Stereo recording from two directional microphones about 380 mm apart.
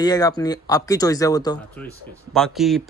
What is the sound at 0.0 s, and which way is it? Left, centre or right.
Speech, centre.